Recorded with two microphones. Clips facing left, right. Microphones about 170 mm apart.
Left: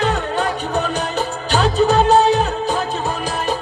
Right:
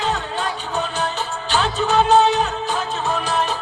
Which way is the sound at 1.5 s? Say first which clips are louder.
Left 4 dB; 40° left (ahead or behind).